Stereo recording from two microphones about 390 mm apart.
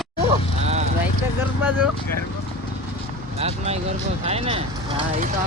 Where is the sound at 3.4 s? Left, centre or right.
Centre.